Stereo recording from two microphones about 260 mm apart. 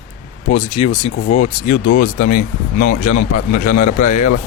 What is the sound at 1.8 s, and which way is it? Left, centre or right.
Speech, left.